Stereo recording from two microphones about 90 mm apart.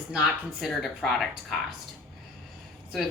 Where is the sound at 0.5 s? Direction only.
Centre (ahead or behind).